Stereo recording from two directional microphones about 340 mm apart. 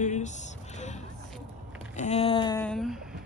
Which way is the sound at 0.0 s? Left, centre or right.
Left.